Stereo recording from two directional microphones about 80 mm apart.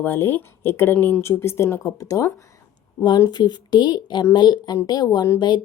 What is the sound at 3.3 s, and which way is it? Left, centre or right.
Speech, left.